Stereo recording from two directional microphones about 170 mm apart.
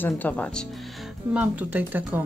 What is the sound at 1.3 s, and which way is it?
Speech, 10° right (ahead or behind).